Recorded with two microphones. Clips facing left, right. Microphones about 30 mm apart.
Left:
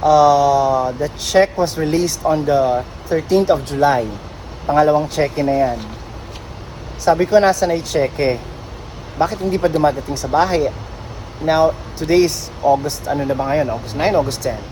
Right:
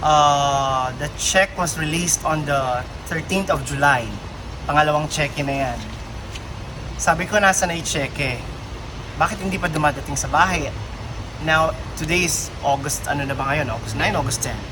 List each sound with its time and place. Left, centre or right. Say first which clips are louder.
0.0 s speech: left 4 dB; right
7.0 s speech: left 5 dB; right
9.1 s speech: left 4 dB; right
13.4 s speech: left 4 dB; right
13.9 s speech: left 4 dB; right
14.5 s speech: left 8 dB; right